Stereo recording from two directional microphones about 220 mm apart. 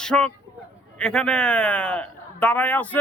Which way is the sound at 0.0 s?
5° left (ahead or behind).